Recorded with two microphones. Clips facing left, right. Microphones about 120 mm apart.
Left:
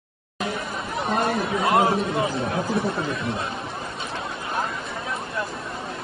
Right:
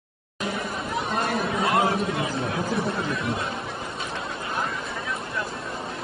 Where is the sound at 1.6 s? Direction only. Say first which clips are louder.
Left 3 dB; 25° left (ahead or behind).